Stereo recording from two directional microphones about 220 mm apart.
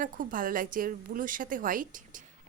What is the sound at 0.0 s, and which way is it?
A woman's voice, 40° right (ahead or behind).